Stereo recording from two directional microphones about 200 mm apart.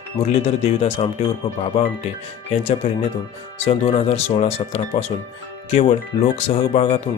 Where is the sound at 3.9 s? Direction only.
30° left (ahead or behind).